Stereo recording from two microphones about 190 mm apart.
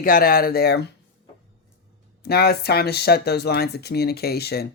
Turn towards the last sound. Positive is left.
turn(degrees=55)  # may be behind; listen again after turning